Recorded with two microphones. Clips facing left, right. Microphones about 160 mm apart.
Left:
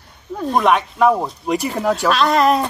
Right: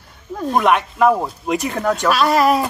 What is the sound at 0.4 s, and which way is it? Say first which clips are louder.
Speech: even; centre (ahead or behind).